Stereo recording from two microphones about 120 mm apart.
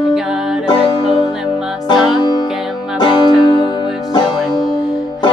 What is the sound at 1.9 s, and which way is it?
Music, 35° left (ahead or behind).